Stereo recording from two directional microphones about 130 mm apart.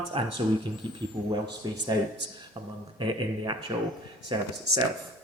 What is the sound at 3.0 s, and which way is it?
Speech, 35° right (ahead or behind).